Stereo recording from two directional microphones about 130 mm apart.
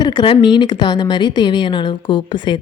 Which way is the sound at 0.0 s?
35° left (ahead or behind).